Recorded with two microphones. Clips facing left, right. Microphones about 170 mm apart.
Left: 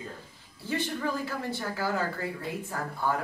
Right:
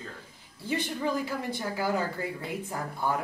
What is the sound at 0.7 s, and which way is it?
Speech, 15° right (ahead or behind).